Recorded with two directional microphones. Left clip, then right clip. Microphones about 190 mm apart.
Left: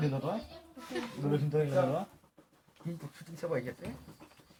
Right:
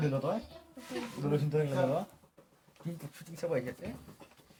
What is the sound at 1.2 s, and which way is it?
Speech, 5° right (ahead or behind).